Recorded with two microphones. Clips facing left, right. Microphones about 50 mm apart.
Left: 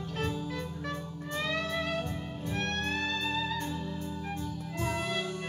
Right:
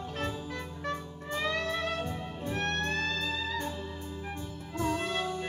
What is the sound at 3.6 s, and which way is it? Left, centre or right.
Music, centre.